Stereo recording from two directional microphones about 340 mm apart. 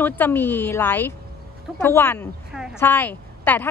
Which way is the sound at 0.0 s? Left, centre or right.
Centre.